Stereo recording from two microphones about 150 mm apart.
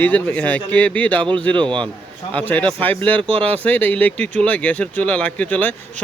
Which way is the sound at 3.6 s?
10° left (ahead or behind).